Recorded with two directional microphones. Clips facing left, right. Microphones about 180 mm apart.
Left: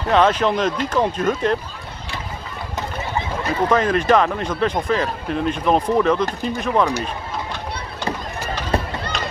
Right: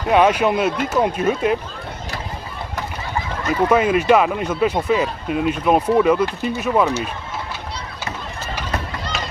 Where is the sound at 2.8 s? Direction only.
25° left (ahead or behind).